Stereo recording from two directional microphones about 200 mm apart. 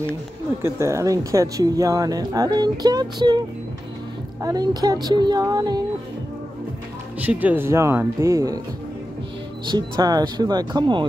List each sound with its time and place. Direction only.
0.6 s speech: 15° right (ahead or behind)
7.2 s speech: 10° right (ahead or behind)
9.7 s speech: 20° right (ahead or behind)